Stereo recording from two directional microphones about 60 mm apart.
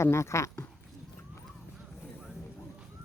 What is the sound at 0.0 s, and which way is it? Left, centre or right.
Speech, left.